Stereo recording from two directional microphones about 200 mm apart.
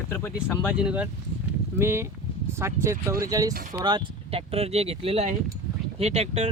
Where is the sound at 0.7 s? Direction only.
5° right (ahead or behind).